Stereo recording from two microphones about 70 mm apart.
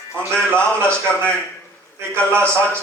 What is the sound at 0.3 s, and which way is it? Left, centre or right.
A man's voice, centre.